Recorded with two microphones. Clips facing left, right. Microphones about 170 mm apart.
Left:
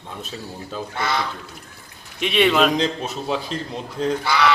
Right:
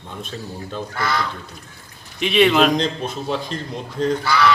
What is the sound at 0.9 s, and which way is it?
Speech, 25° left (ahead or behind).